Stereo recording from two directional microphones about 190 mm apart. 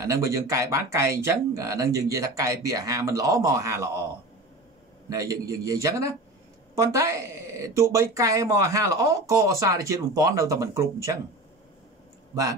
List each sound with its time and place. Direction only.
0.0 s speech: 15° right (ahead or behind)
5.1 s speech: 15° right (ahead or behind)